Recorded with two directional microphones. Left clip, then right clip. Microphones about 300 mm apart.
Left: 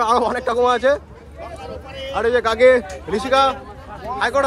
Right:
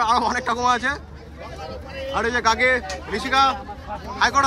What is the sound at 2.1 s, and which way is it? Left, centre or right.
Speech, centre.